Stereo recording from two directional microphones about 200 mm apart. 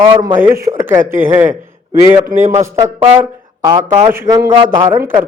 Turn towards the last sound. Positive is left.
turn(degrees=-10)  # may be behind; listen again after turning